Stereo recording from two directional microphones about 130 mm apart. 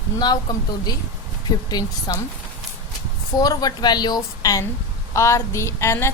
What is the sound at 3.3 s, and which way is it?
A woman's voice, 30° left (ahead or behind).